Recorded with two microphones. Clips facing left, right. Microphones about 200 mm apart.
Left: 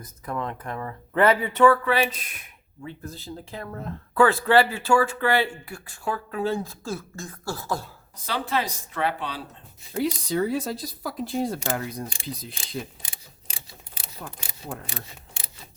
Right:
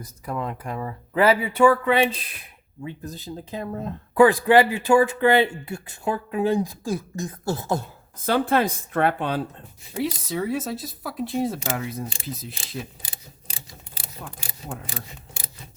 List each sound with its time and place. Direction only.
0.0 s speech: 10° right (ahead or behind); by 2.5 s 30° right (ahead or behind)
2.8 s speech: 15° right (ahead or behind)
8.2 s speech: 50° right (ahead or behind)
9.9 s speech: centre (ahead or behind)